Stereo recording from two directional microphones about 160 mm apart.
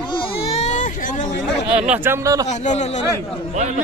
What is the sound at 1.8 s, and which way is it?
Speech, 10° right (ahead or behind).